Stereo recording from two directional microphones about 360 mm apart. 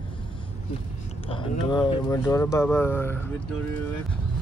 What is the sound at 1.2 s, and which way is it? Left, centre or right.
Speech, centre.